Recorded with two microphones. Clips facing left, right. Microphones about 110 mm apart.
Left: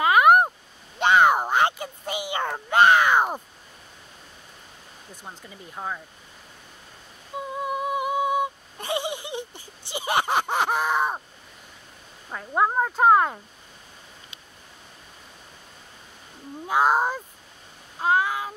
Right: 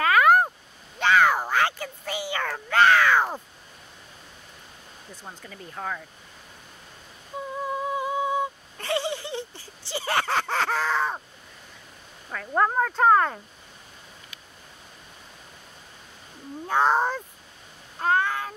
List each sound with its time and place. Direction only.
0.0 s a sound: 20° left (ahead or behind)
5.1 s speech: 15° left (ahead or behind)
7.6 s humming: 15° left (ahead or behind)
12.5 s speech: 15° left (ahead or behind)
16.6 s speech: 10° left (ahead or behind)
17.9 s a sound: 10° left (ahead or behind)